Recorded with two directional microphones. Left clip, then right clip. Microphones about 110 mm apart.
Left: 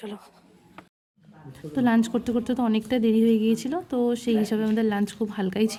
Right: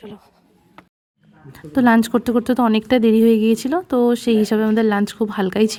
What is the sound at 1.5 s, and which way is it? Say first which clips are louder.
A woman's voice: right 8 dB; 90° right.